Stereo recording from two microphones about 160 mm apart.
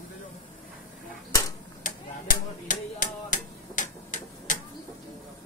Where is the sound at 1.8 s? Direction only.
60° left (ahead or behind).